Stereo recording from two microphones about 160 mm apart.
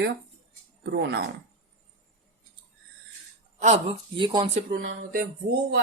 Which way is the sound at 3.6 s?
45° right (ahead or behind).